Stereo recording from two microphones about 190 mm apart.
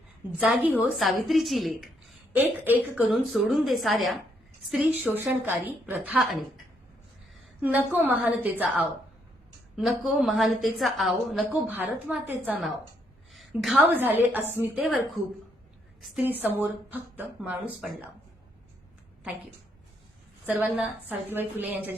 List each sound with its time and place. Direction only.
0.3 s a woman's voice: 5° right (ahead or behind)
7.6 s a woman's voice: 10° right (ahead or behind)
15.2 s a woman's voice: 35° right (ahead or behind)
16.0 s a woman's voice: centre (ahead or behind)
20.5 s speech: 5° right (ahead or behind)